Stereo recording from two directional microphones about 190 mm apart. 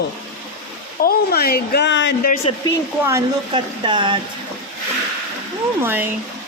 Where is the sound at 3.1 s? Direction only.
15° right (ahead or behind).